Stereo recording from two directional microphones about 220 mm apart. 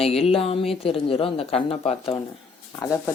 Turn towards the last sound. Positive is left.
turn(degrees=10)  # may be behind; listen again after turning